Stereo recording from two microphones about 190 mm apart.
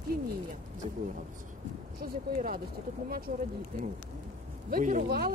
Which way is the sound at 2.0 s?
50° right (ahead or behind).